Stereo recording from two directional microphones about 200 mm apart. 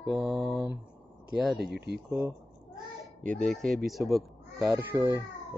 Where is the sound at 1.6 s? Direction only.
55° right (ahead or behind).